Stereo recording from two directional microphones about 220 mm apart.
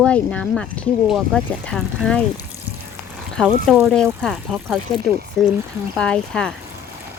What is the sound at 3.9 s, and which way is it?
Speech, centre (ahead or behind).